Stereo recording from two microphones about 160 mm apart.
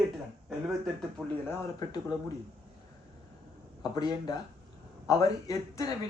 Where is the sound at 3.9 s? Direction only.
25° left (ahead or behind).